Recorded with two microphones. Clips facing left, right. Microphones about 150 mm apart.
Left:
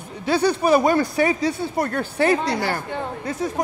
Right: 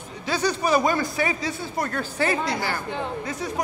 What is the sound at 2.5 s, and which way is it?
Speech, 70° left (ahead or behind).